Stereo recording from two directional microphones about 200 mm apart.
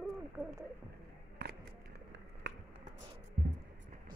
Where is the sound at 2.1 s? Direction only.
60° right (ahead or behind).